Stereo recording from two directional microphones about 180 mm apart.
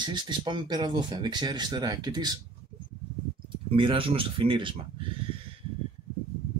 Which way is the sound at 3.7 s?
30° right (ahead or behind).